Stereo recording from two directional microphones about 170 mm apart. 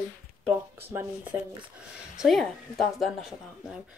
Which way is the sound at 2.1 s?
Centre (ahead or behind).